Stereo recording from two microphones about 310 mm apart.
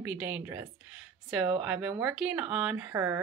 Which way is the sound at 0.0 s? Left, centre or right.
Centre.